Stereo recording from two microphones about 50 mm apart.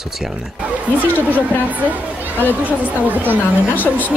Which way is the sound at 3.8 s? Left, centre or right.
Left.